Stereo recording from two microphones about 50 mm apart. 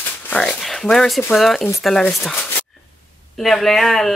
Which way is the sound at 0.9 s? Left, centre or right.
Centre.